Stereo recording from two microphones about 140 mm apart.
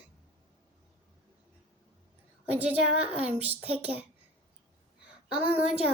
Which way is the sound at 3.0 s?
45° right (ahead or behind).